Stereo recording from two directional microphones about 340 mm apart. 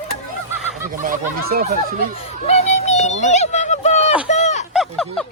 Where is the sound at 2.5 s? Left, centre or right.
Centre.